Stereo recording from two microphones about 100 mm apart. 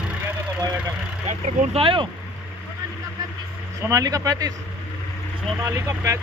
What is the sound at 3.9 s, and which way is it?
Speech, 35° right (ahead or behind).